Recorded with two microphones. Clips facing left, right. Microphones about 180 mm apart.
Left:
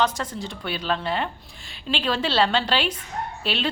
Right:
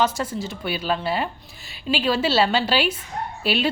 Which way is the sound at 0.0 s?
5° right (ahead or behind).